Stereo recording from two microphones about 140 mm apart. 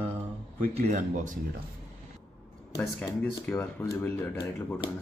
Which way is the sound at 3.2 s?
10° left (ahead or behind).